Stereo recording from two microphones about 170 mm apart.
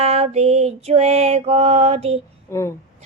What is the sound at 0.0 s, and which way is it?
A woman's voice, 40° right (ahead or behind).